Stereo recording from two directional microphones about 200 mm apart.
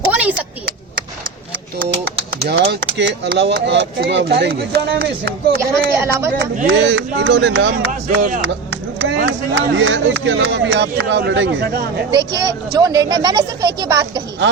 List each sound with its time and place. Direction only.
0.1 s a sound: 5° right (ahead or behind)
2.4 s speech: 55° right (ahead or behind)
5.9 s speech: 15° right (ahead or behind)
6.4 s speech: 55° right (ahead or behind)
9.6 s speech: 65° right (ahead or behind)
12.5 s speech: 15° right (ahead or behind)